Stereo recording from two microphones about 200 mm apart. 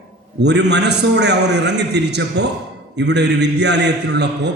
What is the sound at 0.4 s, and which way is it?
A man's voice, 60° right (ahead or behind).